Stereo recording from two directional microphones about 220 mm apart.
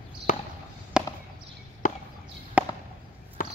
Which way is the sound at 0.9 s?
5° right (ahead or behind).